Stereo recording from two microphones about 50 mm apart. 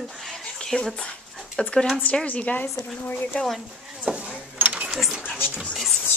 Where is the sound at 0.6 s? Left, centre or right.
Centre.